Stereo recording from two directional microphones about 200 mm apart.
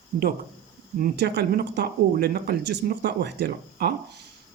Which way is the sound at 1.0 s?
55° right (ahead or behind).